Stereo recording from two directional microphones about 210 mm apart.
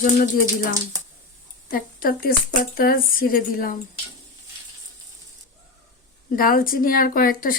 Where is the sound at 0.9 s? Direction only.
15° right (ahead or behind).